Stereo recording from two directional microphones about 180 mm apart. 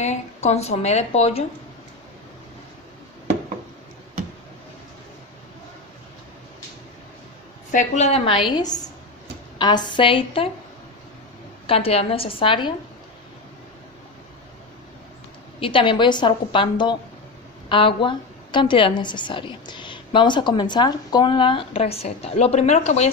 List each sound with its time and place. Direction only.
0.0 s a woman's voice: 40° left (ahead or behind)
7.7 s a woman's voice: 40° left (ahead or behind)
11.6 s a woman's voice: 30° left (ahead or behind)
15.6 s a woman's voice: 30° left (ahead or behind)